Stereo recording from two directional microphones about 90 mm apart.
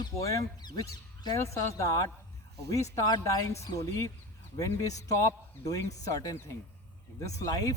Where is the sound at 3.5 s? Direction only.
40° left (ahead or behind).